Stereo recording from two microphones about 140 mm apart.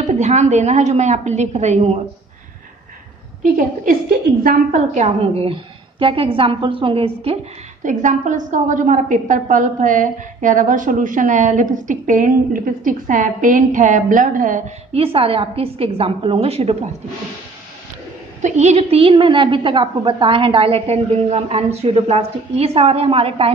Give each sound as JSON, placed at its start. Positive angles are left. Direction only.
{"t": 0.0, "sound": "a woman's voice", "side_deg": -55}
{"t": 4.4, "sound": "a woman's voice", "side_deg": -70}
{"t": 7.8, "sound": "a woman's voice", "side_deg": -65}
{"t": 14.9, "sound": "a woman's voice", "side_deg": -45}
{"t": 18.4, "sound": "a woman's voice", "side_deg": -55}